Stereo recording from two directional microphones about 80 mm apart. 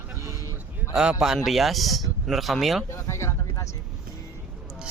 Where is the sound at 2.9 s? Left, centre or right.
Left.